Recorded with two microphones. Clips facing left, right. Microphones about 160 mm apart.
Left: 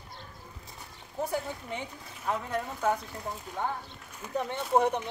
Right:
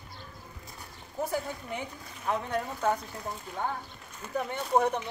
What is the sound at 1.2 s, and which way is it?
Speech, 5° right (ahead or behind).